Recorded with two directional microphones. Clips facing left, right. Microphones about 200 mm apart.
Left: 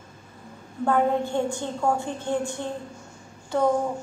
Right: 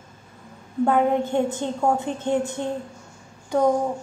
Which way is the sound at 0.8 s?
20° right (ahead or behind).